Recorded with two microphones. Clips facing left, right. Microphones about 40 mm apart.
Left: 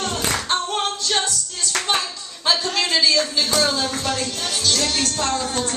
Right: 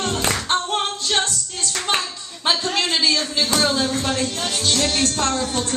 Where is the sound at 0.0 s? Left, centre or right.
Right.